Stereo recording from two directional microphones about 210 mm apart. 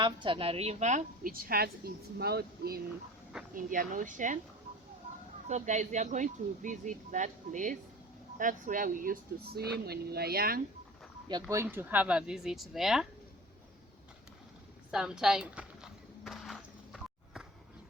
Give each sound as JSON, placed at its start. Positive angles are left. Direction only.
{"t": 0.0, "sound": "a woman's voice", "side_deg": -25}
{"t": 5.5, "sound": "a woman's voice", "side_deg": -35}
{"t": 11.3, "sound": "speech", "side_deg": -15}
{"t": 14.8, "sound": "walk", "side_deg": -5}